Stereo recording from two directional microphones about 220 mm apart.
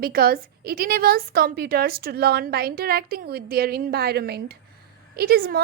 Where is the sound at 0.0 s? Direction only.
45° right (ahead or behind).